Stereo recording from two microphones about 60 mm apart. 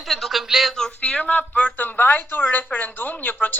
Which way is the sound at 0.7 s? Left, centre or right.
Centre.